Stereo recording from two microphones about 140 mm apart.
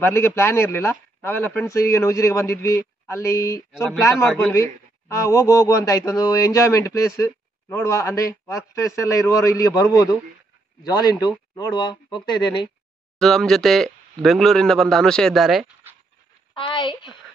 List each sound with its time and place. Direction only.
0.0 s speech: 20° left (ahead or behind)
4.3 s a man's voice: 10° left (ahead or behind)
4.6 s speech: 20° left (ahead or behind)
13.2 s speech: 5° left (ahead or behind)
16.6 s speech: 35° left (ahead or behind)